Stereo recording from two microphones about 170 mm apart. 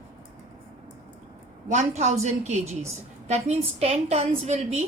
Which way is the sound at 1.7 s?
40° right (ahead or behind).